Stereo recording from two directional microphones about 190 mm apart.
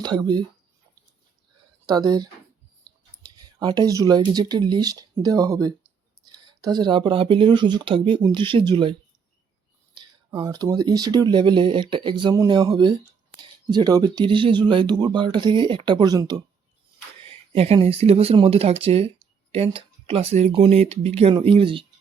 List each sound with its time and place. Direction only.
0.0 s speech: 20° right (ahead or behind)
1.9 s speech: 20° right (ahead or behind)
17.2 s speech: 30° right (ahead or behind)